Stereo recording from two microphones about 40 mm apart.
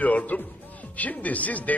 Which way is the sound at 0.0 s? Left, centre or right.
Left.